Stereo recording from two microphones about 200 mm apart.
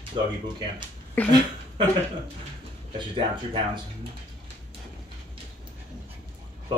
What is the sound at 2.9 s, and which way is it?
Speech, 25° right (ahead or behind).